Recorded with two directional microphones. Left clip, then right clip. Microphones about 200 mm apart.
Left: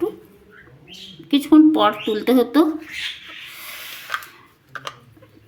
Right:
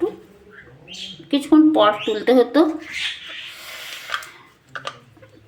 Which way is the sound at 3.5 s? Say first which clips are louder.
Right 1 dB; 45° left (ahead or behind).